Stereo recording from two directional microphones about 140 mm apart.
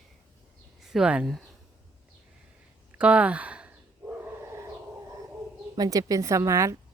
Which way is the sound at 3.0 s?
10° right (ahead or behind).